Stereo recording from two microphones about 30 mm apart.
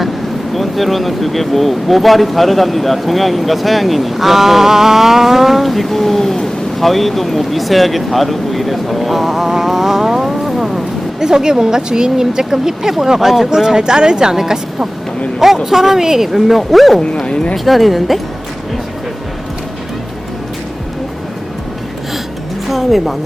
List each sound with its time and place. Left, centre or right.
0.5 s speech: centre
5.6 s speech: centre
11.2 s speech: right; by 18.2 s centre
22.7 s speech: centre